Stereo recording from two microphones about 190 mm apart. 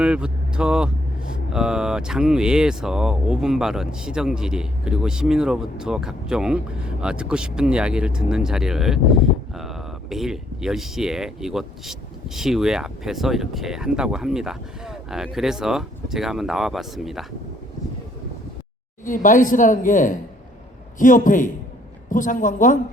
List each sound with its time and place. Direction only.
0.0 s speech: 5° right (ahead or behind)
19.0 s speech: 45° left (ahead or behind)